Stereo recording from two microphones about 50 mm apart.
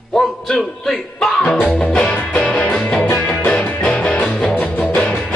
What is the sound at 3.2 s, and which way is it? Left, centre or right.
Music, left.